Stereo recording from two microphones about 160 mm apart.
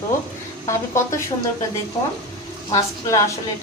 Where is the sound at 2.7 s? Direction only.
20° left (ahead or behind).